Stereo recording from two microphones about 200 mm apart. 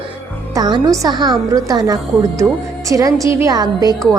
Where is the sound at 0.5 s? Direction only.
20° right (ahead or behind).